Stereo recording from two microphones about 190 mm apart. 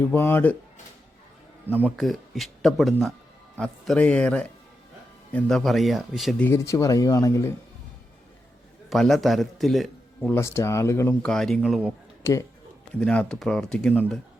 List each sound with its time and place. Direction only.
0.0 s speech: 10° left (ahead or behind)
1.7 s speech: 5° right (ahead or behind)
6.5 s speech: 15° left (ahead or behind)
8.9 s a man's voice: centre (ahead or behind)
10.3 s speech: 15° left (ahead or behind)
11.3 s speech: centre (ahead or behind)
12.2 s speech: 15° left (ahead or behind)
13.0 s speech: 5° left (ahead or behind)